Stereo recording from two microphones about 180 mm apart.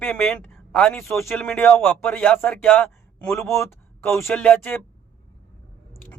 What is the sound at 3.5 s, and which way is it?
Speech, 15° left (ahead or behind).